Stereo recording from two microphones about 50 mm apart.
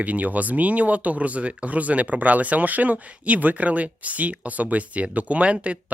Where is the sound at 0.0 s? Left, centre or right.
Right.